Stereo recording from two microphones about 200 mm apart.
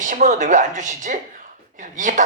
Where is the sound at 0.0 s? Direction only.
40° right (ahead or behind).